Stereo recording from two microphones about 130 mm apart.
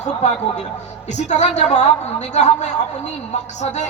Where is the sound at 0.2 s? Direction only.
60° left (ahead or behind).